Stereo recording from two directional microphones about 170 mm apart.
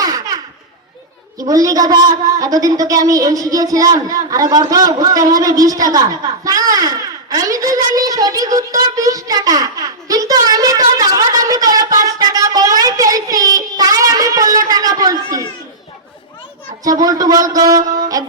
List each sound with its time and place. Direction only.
1.4 s a woman's voice: 20° right (ahead or behind)
6.4 s a sound: 20° right (ahead or behind)
16.8 s a woman's voice: 20° right (ahead or behind)